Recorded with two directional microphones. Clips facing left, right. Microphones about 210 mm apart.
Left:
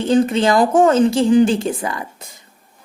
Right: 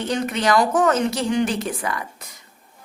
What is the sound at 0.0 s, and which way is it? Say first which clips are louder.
A woman's voice: left 8 dB; 30° left (ahead or behind).